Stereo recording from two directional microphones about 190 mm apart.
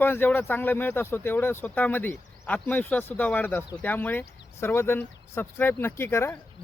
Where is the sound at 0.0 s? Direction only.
10° left (ahead or behind).